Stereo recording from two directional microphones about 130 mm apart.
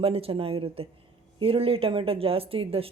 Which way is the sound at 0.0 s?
50° right (ahead or behind).